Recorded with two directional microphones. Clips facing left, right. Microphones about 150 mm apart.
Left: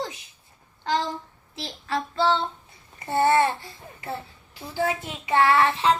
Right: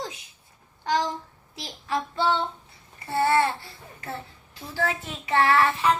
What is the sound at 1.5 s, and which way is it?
Child singing, 15° right (ahead or behind).